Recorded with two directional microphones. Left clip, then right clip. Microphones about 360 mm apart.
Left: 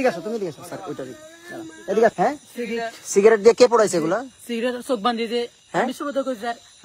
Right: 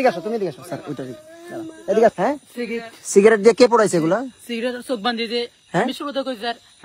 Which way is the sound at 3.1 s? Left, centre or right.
Right.